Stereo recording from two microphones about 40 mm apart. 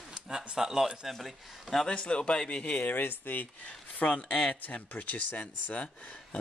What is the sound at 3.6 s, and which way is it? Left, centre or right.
Speech, left.